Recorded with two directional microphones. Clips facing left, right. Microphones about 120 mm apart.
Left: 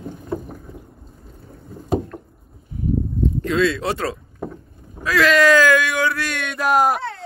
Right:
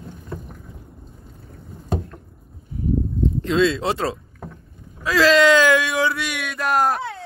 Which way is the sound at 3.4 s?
25° right (ahead or behind).